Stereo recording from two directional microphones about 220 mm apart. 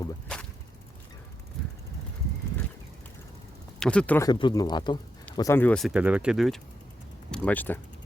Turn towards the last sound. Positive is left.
turn(degrees=5)  # may be behind; listen again after turning